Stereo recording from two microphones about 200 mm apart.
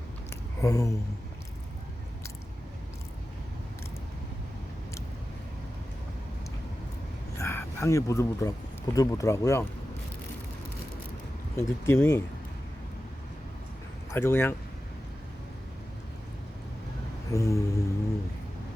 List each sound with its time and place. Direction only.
0.6 s speech: 15° left (ahead or behind)
7.3 s speech: 15° left (ahead or behind)
11.5 s speech: 10° left (ahead or behind)
14.1 s speech: 10° left (ahead or behind)
17.3 s speech: 15° left (ahead or behind)